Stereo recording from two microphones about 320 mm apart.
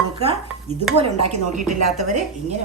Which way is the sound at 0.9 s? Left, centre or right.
Centre.